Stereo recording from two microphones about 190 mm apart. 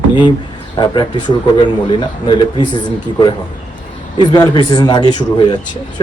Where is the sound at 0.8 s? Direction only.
25° left (ahead or behind).